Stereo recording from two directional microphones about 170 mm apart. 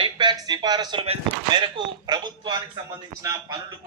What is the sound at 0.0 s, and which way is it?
Speech, 25° right (ahead or behind).